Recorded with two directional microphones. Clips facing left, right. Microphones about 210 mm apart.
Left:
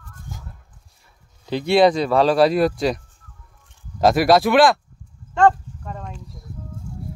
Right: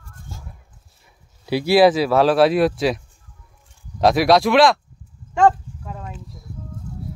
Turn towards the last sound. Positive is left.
turn(degrees=-5)  # may be behind; listen again after turning